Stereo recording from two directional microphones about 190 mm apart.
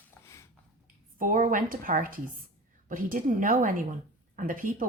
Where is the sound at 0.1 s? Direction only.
15° left (ahead or behind).